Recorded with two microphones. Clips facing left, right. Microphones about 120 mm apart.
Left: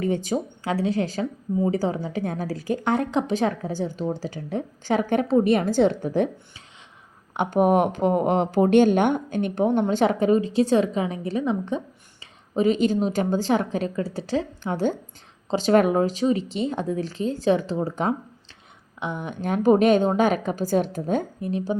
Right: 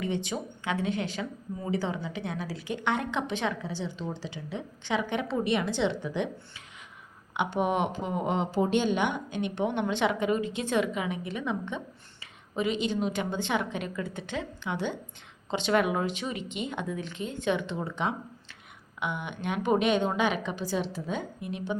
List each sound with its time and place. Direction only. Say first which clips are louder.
0.0 s speech: left 7 dB; 40° left (ahead or behind)
7.3 s speech: left 8 dB; 45° left (ahead or behind)